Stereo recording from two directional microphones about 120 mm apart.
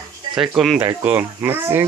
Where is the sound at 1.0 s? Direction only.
15° right (ahead or behind).